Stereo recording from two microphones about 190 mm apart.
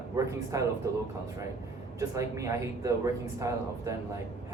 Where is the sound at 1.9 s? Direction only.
15° right (ahead or behind).